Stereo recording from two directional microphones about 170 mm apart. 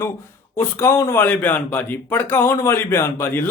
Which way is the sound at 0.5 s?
15° left (ahead or behind).